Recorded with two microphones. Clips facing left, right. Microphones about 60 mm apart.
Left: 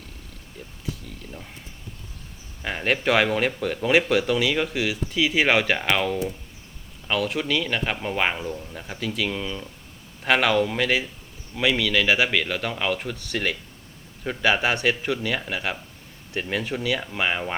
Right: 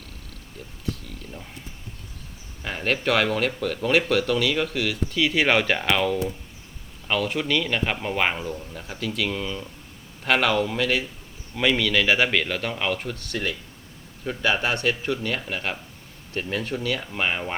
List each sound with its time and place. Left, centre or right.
0.9 s a man's voice: centre
2.6 s a man's voice: centre
15.0 s a man's voice: centre
16.4 s speech: centre
16.8 s a man's voice: centre